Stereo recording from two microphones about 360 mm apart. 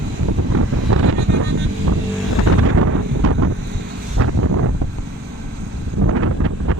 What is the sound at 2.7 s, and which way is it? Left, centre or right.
Wind noise, right.